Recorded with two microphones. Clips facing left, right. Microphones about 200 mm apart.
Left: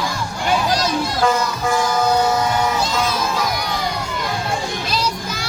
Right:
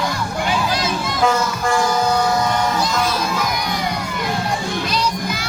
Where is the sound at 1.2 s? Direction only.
5° left (ahead or behind).